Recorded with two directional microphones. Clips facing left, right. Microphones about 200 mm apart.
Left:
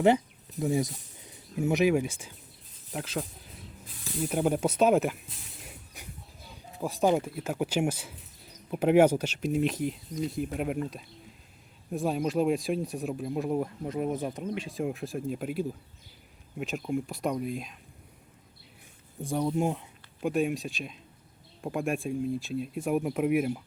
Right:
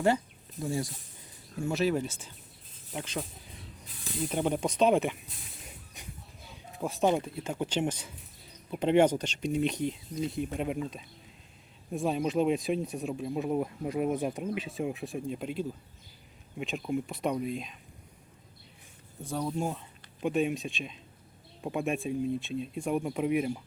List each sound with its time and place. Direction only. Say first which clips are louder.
0.6 s speech: left 5 dB; 20° left (ahead or behind)
5.6 s a sound: left 1 dB; 5° left (ahead or behind)
6.7 s speech: left 2 dB; centre (ahead or behind)
19.2 s speech: left 4 dB; 15° left (ahead or behind)
20.2 s speech: left 1 dB; centre (ahead or behind)